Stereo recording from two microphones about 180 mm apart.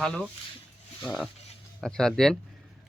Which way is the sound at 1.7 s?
5° left (ahead or behind).